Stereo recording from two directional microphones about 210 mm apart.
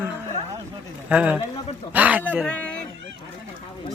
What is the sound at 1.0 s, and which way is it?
Speech, 5° right (ahead or behind).